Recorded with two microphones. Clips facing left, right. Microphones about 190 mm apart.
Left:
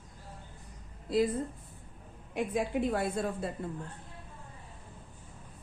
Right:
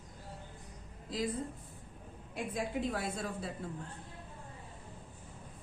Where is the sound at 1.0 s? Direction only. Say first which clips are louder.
Left 8 dB; 60° left (ahead or behind).